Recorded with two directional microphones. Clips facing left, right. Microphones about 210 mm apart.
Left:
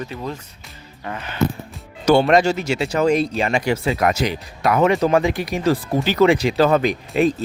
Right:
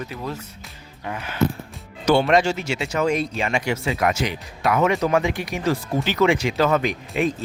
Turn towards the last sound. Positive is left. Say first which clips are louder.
# left 5 dB
turn(degrees=35)  # may be behind; listen again after turning